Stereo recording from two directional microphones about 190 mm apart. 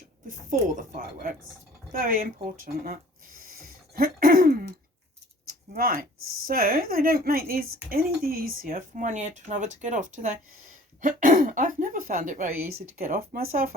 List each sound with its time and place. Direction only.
0.3 s speech: 40° right (ahead or behind)
5.5 s a sound: 50° right (ahead or behind)
6.5 s speech: 50° right (ahead or behind)